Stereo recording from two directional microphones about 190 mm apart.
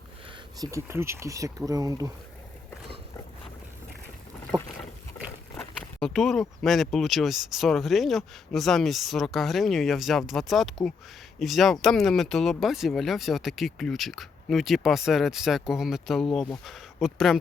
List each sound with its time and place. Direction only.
0.6 s speech: 15° right (ahead or behind)
4.5 s speech: 20° right (ahead or behind)
5.5 s a sound: centre (ahead or behind)
6.6 s speech: centre (ahead or behind)